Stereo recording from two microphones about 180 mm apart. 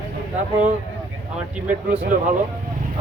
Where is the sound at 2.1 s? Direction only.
45° right (ahead or behind).